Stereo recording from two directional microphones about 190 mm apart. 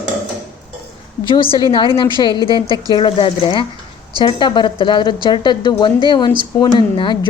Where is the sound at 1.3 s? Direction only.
25° left (ahead or behind).